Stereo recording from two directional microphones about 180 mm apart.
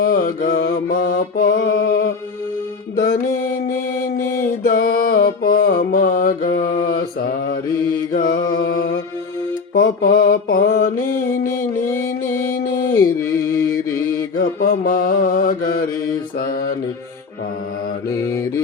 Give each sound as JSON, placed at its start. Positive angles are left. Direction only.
{"t": 0.0, "sound": "mantra", "side_deg": 50}
{"t": 4.7, "sound": "mantra", "side_deg": 55}
{"t": 8.1, "sound": "music", "side_deg": 55}
{"t": 9.7, "sound": "mantra", "side_deg": 55}
{"t": 11.4, "sound": "music", "side_deg": 15}
{"t": 12.9, "sound": "a sound", "side_deg": 15}
{"t": 14.3, "sound": "mantra", "side_deg": 50}
{"t": 18.1, "sound": "mantra", "side_deg": 15}